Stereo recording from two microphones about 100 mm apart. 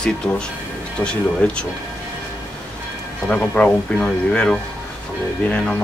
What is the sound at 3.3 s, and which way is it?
Speech, 15° left (ahead or behind).